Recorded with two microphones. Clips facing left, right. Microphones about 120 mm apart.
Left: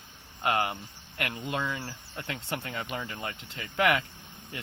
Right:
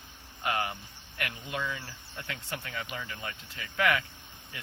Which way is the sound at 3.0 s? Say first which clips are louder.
Left 3 dB; 35° left (ahead or behind).